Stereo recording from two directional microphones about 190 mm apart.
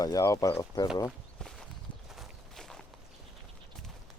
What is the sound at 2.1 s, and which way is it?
Walk, centre (ahead or behind).